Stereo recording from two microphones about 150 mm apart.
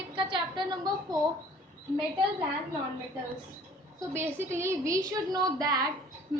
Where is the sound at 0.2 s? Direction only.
30° right (ahead or behind).